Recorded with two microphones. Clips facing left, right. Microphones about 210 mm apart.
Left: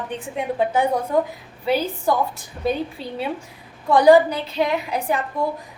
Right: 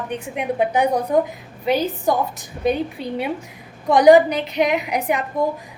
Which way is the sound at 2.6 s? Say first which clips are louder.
Right 3 dB; 15° right (ahead or behind).